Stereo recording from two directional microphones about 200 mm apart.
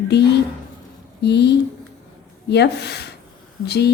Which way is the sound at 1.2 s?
55° left (ahead or behind).